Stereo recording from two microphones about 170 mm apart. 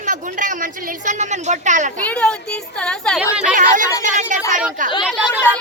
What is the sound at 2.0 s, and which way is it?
A woman's voice, 5° left (ahead or behind).